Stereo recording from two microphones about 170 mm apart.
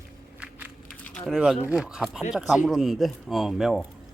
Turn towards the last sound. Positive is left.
turn(degrees=0)  # may be behind; listen again after turning